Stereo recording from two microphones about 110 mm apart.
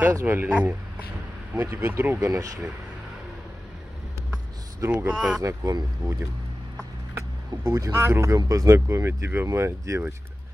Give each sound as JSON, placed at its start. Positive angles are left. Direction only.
{"t": 0.1, "sound": "speech", "side_deg": -20}
{"t": 4.7, "sound": "speech", "side_deg": -20}
{"t": 5.1, "sound": "speech", "side_deg": -10}
{"t": 5.4, "sound": "speech", "side_deg": -25}
{"t": 7.6, "sound": "speech", "side_deg": -25}